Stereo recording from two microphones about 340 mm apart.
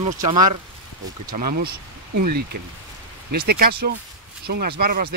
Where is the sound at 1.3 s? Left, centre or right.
Right.